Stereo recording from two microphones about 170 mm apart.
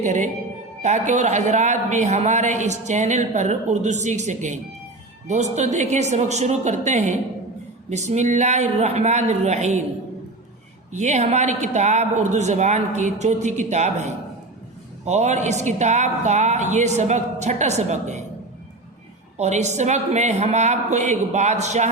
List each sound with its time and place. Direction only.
0.0 s a man's voice: 45° right (ahead or behind)
10.9 s a man's voice: 45° right (ahead or behind)
19.4 s a man's voice: 40° right (ahead or behind)